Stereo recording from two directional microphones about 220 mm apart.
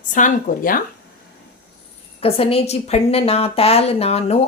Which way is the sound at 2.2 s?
25° left (ahead or behind).